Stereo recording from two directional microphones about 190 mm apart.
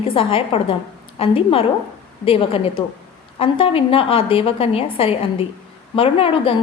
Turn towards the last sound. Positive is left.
turn(degrees=30)  # may be behind; listen again after turning